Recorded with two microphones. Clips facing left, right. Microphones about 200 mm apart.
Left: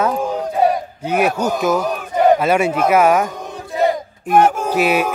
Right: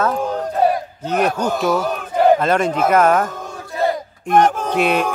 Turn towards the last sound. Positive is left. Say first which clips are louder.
# left 1 dB
turn(degrees=5)  # may be behind; listen again after turning